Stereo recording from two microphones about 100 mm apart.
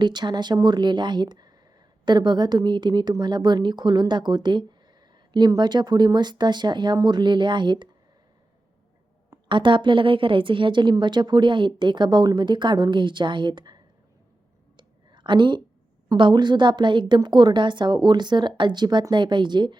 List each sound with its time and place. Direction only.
0.0 s a woman's voice: 45° right (ahead or behind)
9.5 s a woman's voice: 55° right (ahead or behind)
14.8 s a sound: 50° right (ahead or behind)
16.1 s a woman's voice: 50° right (ahead or behind)